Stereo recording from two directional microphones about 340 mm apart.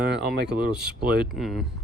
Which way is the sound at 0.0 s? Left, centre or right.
Right.